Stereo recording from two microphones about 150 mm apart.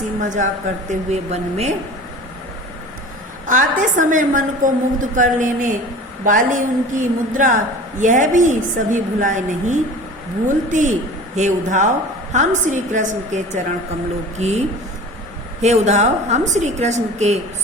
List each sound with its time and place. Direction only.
0.2 s a woman's voice: 55° right (ahead or behind)
3.4 s a woman's voice: 60° right (ahead or behind)
15.6 s a woman's voice: 50° right (ahead or behind)